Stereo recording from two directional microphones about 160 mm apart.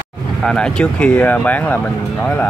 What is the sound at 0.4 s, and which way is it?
Speech, 5° left (ahead or behind).